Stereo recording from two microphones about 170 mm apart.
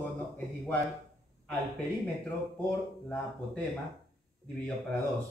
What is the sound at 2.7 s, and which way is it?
Speech, 5° left (ahead or behind).